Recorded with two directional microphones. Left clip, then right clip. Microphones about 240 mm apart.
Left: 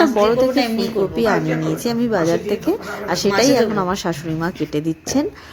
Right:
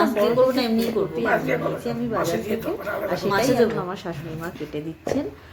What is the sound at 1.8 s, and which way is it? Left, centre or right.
Speech, left.